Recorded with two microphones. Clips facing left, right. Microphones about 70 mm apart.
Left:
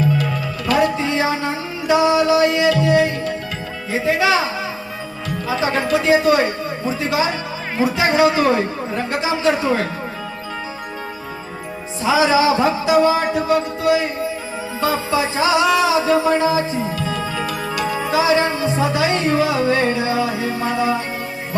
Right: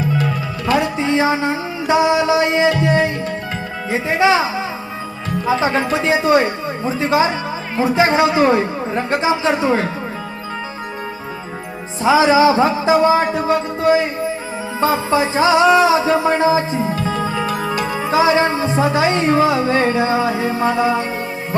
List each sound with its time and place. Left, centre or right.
0.7 s music: right
5.5 s music: right
12.0 s speech: right
14.8 s music: right